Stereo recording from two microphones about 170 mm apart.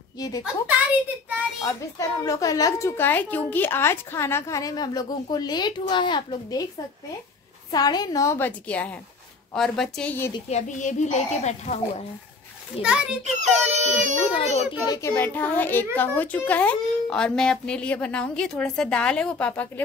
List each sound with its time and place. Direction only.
1.6 s a woman's voice: 20° left (ahead or behind)
7.7 s speech: 25° left (ahead or behind)
10.5 s a child's voice: 45° left (ahead or behind)
12.8 s a child's voice: 5° right (ahead or behind)
13.2 s speech: 40° right (ahead or behind)
14.3 s a child's voice: 35° left (ahead or behind)
14.9 s speech: 15° left (ahead or behind)